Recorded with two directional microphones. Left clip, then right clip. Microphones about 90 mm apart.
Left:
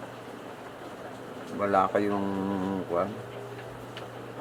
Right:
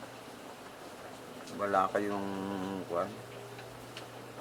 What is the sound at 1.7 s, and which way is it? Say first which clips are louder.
Speech: left 5 dB; 5° right (ahead or behind).